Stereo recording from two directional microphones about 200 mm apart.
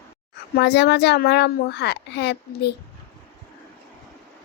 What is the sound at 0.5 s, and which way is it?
A woman's voice, 55° left (ahead or behind).